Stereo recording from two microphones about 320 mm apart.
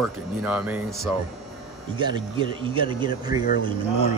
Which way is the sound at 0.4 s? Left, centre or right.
Centre.